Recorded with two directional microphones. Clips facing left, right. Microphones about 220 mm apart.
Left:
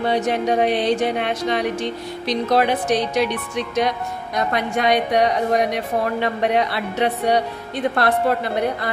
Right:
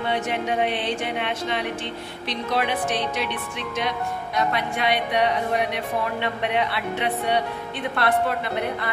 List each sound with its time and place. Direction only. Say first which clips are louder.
0.0 s music: left 6 dB; 40° left (ahead or behind)